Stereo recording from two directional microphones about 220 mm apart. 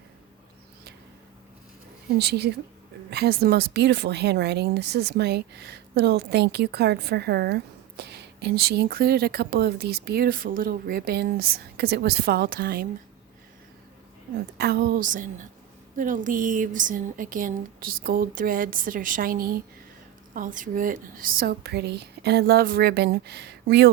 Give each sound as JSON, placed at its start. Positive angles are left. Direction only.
{"t": 2.1, "sound": "speech", "side_deg": -50}
{"t": 14.6, "sound": "speech", "side_deg": -45}